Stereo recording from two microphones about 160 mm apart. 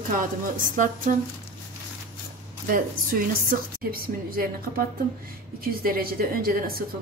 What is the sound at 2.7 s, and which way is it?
A woman's voice, 60° right (ahead or behind).